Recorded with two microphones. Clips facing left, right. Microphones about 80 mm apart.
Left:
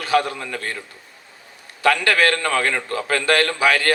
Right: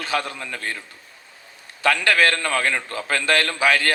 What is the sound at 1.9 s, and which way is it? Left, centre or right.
A man's voice, left.